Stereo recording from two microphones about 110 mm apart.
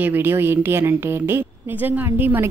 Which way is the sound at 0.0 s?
20° right (ahead or behind).